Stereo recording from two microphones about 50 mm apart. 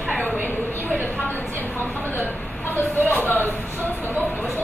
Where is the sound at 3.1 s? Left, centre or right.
Left.